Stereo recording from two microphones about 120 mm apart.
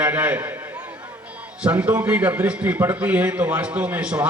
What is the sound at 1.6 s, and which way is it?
A man's voice, 10° right (ahead or behind).